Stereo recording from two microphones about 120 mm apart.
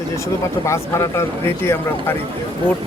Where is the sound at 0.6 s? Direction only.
25° left (ahead or behind).